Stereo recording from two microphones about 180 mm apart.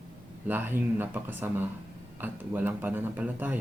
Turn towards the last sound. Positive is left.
turn(degrees=-10)  # may be behind; listen again after turning